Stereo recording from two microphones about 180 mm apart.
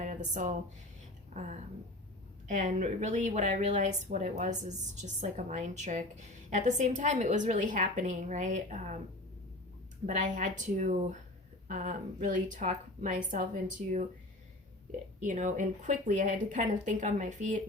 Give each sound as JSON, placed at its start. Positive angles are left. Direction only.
{"t": 0.0, "sound": "a sound", "side_deg": -40}
{"t": 1.3, "sound": "a woman's voice", "side_deg": -40}
{"t": 10.1, "sound": "speech", "side_deg": -45}
{"t": 15.2, "sound": "speech", "side_deg": -45}